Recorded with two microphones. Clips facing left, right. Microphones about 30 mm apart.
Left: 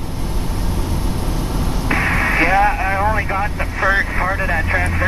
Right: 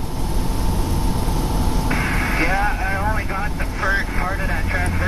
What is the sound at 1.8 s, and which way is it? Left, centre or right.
Radio, left.